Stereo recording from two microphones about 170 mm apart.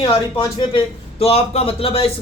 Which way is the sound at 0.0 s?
30° left (ahead or behind).